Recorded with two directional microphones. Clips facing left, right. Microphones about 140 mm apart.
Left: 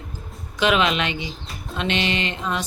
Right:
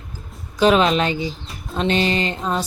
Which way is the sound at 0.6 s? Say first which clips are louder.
Right 5 dB; 35° right (ahead or behind).